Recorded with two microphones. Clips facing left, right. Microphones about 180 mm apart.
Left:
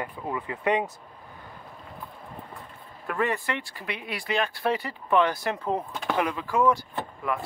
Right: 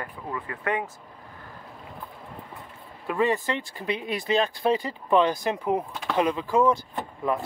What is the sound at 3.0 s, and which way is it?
Speech, 15° right (ahead or behind).